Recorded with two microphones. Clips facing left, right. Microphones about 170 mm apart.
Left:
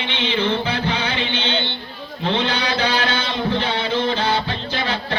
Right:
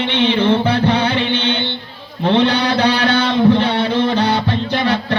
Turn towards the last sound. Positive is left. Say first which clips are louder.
# right 7 dB
turn(degrees=-60)  # may be behind; listen again after turning